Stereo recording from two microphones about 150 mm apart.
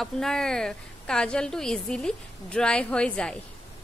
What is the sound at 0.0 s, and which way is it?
A woman's voice, 5° left (ahead or behind).